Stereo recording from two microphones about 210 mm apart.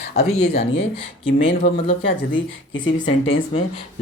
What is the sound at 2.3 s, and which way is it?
Speech, 65° left (ahead or behind).